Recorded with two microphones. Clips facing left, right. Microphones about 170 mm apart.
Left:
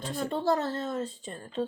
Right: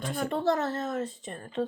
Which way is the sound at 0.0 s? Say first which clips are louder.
Right 2 dB; 30° left (ahead or behind).